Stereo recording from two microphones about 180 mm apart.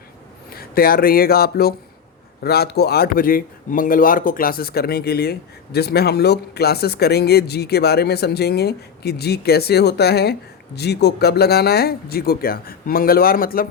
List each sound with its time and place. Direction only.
0.5 s speech: 55° left (ahead or behind)